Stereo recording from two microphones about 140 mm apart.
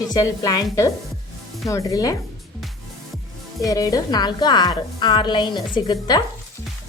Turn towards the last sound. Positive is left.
turn(degrees=30)  # may be behind; listen again after turning